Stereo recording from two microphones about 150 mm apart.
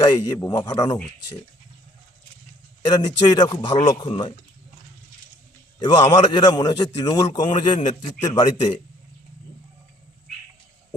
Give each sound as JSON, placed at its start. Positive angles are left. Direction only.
{"t": 0.0, "sound": "a man's voice", "side_deg": 25}
{"t": 2.9, "sound": "a man's voice", "side_deg": 25}
{"t": 5.8, "sound": "a man's voice", "side_deg": 30}